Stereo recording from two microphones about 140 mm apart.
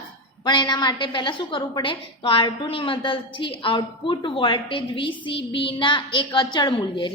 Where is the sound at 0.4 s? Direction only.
30° left (ahead or behind).